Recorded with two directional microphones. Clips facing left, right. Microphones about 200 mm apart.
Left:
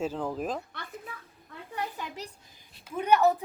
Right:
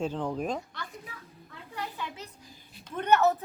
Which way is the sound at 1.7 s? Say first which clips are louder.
Left 2 dB; 40° left (ahead or behind).